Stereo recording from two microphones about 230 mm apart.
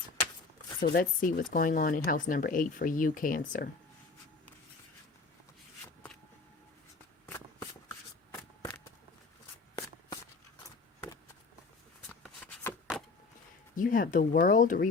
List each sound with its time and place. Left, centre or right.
0.8 s speech: left
7.3 s shuffling cards: centre
12.0 s shuffling cards: centre
13.7 s speech: left